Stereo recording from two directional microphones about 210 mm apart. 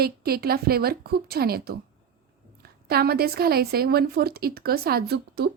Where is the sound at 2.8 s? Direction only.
45° right (ahead or behind).